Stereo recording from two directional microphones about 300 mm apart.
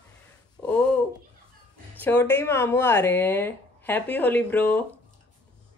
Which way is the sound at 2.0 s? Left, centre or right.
Centre.